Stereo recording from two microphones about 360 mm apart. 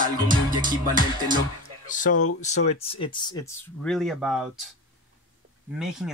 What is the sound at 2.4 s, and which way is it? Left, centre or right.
Speech, centre.